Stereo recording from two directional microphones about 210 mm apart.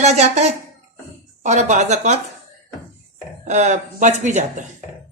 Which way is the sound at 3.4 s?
35° right (ahead or behind).